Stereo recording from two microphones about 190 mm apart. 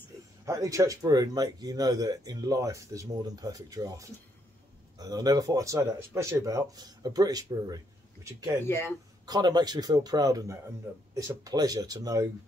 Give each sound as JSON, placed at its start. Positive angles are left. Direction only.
{"t": 0.5, "sound": "speech", "side_deg": -15}
{"t": 8.6, "sound": "speech", "side_deg": 15}
{"t": 9.2, "sound": "speech", "side_deg": -20}